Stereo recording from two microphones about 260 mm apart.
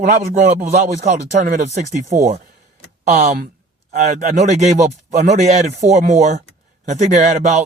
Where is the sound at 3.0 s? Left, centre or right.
Right.